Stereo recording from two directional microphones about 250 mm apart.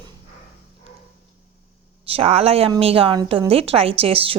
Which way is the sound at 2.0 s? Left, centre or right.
Right.